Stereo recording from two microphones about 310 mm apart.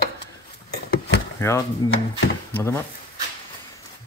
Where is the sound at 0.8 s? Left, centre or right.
Left.